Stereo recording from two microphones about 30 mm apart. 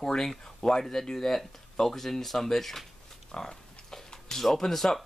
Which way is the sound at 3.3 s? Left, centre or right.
Left.